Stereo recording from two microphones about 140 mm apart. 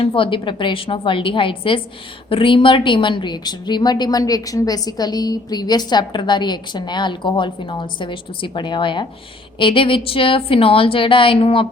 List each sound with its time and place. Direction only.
0.0 s a woman's voice: 35° left (ahead or behind)